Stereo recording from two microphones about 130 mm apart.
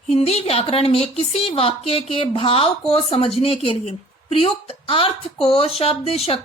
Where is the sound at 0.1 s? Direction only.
55° left (ahead or behind).